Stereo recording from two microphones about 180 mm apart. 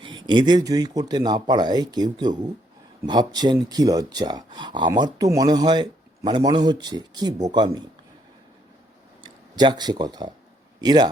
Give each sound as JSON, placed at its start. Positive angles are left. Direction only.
{"t": 0.3, "sound": "speech", "side_deg": -25}
{"t": 9.2, "sound": "speech", "side_deg": -25}